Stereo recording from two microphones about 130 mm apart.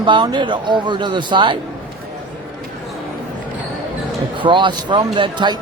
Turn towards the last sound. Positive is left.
turn(degrees=-35)  # may be behind; listen again after turning